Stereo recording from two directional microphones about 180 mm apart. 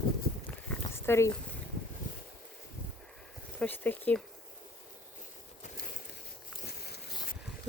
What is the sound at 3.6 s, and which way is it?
Speech, 10° left (ahead or behind).